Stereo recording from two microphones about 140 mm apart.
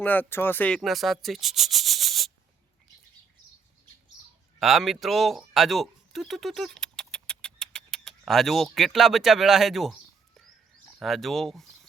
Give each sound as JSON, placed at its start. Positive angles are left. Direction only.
{"t": 0.0, "sound": "speech", "side_deg": 10}
{"t": 4.6, "sound": "speech", "side_deg": 0}